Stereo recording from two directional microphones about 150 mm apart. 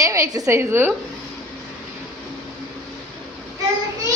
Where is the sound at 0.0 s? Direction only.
20° right (ahead or behind).